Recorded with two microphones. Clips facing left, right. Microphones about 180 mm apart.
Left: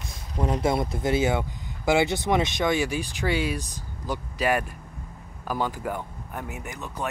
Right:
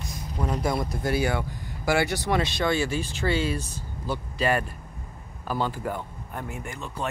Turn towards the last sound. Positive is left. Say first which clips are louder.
# even
turn(degrees=15)  # may be behind; listen again after turning